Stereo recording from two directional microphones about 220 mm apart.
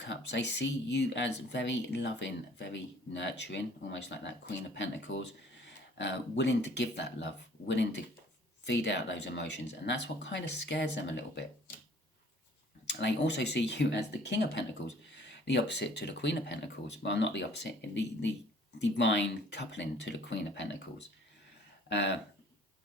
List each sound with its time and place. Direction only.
0.0 s speech: 55° left (ahead or behind)
12.9 s speech: 50° left (ahead or behind)
21.8 s speech: 50° left (ahead or behind)